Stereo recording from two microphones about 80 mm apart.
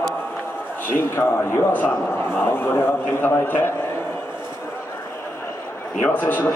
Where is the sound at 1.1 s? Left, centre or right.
Left.